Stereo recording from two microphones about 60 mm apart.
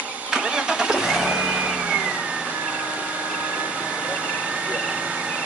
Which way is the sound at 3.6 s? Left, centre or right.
Centre.